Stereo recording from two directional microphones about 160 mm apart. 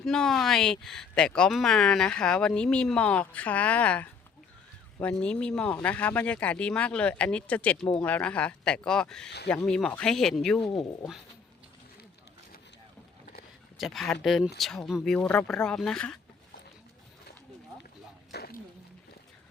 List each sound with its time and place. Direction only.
0.0 s speech: 5° left (ahead or behind)
13.7 s speech: centre (ahead or behind)
18.3 s a sound: 75° left (ahead or behind)